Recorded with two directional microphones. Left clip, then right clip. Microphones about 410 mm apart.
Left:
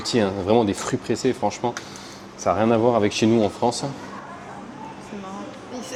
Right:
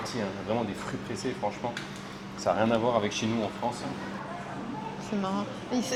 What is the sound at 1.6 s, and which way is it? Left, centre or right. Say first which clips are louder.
Speech: left 7 dB; left.